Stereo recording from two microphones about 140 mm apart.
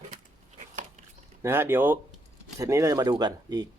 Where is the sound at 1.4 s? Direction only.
15° right (ahead or behind).